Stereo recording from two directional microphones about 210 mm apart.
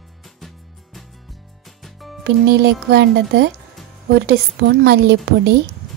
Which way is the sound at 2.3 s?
55° right (ahead or behind).